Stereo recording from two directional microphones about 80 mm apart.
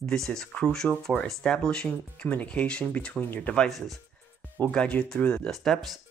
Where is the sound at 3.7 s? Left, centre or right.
Centre.